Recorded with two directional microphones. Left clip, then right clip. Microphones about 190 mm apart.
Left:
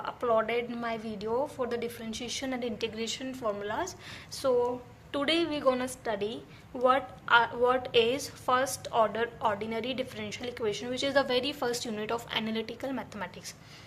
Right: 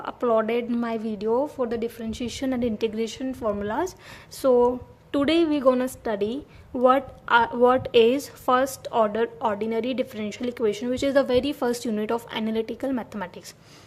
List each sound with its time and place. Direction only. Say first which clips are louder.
0.0 s a woman's voice: right 5 dB; 45° right (ahead or behind)